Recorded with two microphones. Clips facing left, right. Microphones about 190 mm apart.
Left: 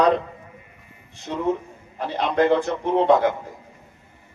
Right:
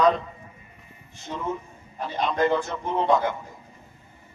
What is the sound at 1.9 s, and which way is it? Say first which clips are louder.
A man's voice: left 4 dB; 65° left (ahead or behind).